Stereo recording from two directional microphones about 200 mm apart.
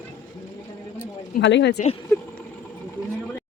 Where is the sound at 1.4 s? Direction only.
60° left (ahead or behind).